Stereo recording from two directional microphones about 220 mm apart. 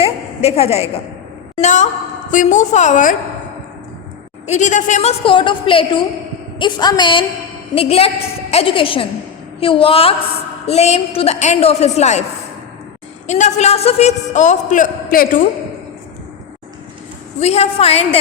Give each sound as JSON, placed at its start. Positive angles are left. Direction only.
{"t": 0.0, "sound": "a sound", "side_deg": 25}
{"t": 1.6, "sound": "a man's voice", "side_deg": 35}
{"t": 4.4, "sound": "a woman's voice", "side_deg": 30}
{"t": 13.2, "sound": "a man's voice", "side_deg": 30}
{"t": 17.4, "sound": "a woman's voice", "side_deg": 30}